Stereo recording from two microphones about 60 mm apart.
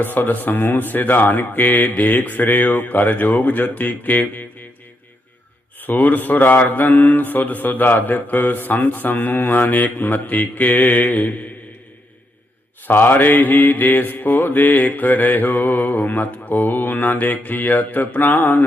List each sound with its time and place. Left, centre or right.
0.0 s mantra: left
5.8 s mantra: left
12.9 s mantra: left